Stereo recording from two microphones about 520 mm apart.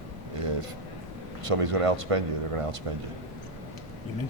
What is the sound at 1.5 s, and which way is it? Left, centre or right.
Speech, right.